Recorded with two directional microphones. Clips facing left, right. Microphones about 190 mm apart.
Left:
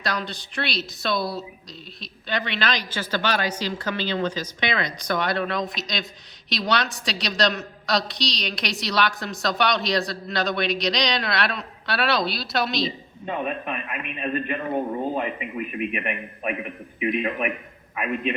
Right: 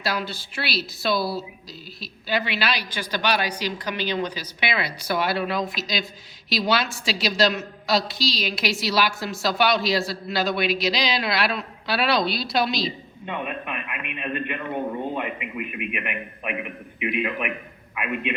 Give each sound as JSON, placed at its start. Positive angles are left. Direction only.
{"t": 0.0, "sound": "a woman's voice", "side_deg": -5}
{"t": 13.2, "sound": "a man's voice", "side_deg": 35}
{"t": 17.9, "sound": "a man's voice", "side_deg": 35}